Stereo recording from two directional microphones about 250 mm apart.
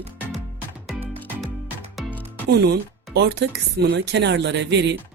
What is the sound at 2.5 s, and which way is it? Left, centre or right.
Speech, right.